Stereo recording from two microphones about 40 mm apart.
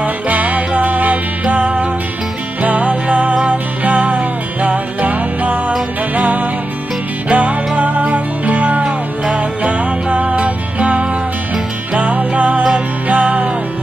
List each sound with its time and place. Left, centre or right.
0.0 s music: right
8.8 s music: right